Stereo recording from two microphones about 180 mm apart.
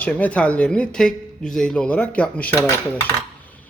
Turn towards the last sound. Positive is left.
turn(degrees=15)  # may be behind; listen again after turning